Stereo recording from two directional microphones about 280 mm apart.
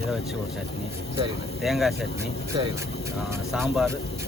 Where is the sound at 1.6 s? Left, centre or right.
Centre.